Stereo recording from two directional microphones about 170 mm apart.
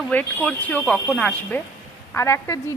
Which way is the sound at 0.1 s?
10° left (ahead or behind).